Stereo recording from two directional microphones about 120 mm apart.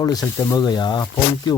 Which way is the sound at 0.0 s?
30° left (ahead or behind).